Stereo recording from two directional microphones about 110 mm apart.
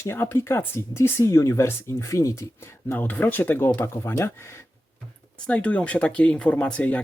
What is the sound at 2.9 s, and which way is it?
Speech, 15° left (ahead or behind).